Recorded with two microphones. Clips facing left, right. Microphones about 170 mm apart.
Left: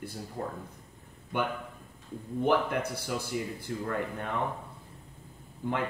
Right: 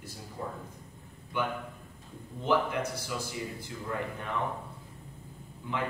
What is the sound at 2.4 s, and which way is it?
Speech, 55° left (ahead or behind).